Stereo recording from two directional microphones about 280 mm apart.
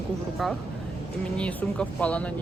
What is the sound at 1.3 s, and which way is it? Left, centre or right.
Speech, centre.